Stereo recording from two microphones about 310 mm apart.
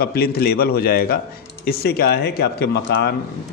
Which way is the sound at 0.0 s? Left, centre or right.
Left.